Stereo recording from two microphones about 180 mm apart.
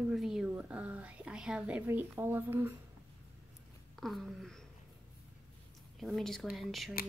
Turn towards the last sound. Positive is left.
turn(degrees=0)  # may be behind; listen again after turning